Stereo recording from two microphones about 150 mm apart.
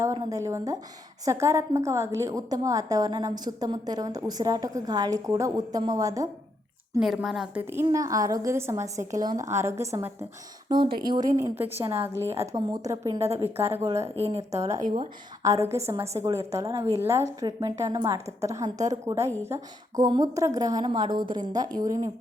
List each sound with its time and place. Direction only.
0.0 s a woman's voice: 20° right (ahead or behind)
7.0 s a woman's voice: centre (ahead or behind); by 10.1 s 20° right (ahead or behind)
10.7 s a woman's voice: 30° right (ahead or behind)